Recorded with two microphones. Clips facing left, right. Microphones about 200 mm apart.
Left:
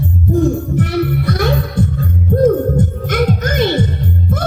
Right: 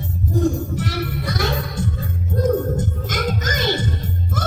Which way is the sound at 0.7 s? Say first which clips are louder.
Left 9 dB; 55° left (ahead or behind).